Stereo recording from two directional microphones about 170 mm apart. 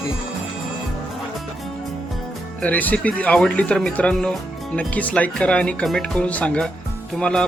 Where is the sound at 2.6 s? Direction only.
10° left (ahead or behind).